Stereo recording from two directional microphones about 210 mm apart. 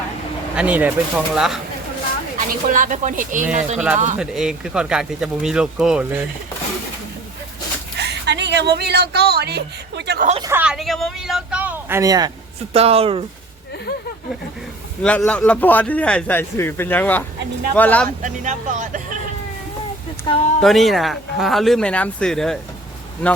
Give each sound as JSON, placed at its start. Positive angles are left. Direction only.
{"t": 0.5, "sound": "speech", "side_deg": -5}
{"t": 2.5, "sound": "speech", "side_deg": -40}
{"t": 4.2, "sound": "speech", "side_deg": -5}
{"t": 7.9, "sound": "speech", "side_deg": -55}
{"t": 10.4, "sound": "speech", "side_deg": -10}
{"t": 12.7, "sound": "speech", "side_deg": -30}
{"t": 15.0, "sound": "a man's voice", "side_deg": 5}
{"t": 18.2, "sound": "speech", "side_deg": -35}
{"t": 20.3, "sound": "speech", "side_deg": 20}
{"t": 20.6, "sound": "speech", "side_deg": 0}